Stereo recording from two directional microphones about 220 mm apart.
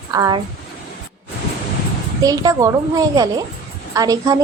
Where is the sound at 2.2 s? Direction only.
15° right (ahead or behind).